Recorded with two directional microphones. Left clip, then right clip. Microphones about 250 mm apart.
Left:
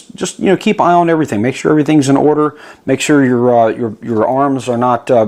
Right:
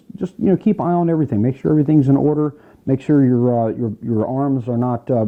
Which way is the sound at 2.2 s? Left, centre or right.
Left.